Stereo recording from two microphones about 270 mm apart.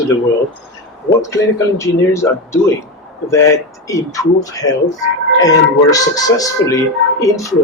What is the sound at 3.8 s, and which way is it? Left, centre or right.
Speech, centre.